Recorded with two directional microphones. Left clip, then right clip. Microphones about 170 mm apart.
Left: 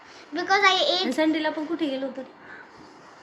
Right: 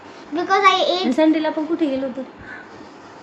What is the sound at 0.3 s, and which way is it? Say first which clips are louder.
Speech: right 5 dB; 15° right (ahead or behind).